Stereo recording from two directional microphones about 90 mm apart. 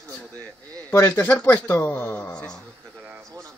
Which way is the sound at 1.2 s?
20° left (ahead or behind).